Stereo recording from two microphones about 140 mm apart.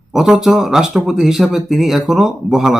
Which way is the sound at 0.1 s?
5° right (ahead or behind).